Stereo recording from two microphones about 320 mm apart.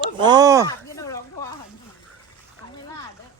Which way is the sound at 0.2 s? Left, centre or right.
Centre.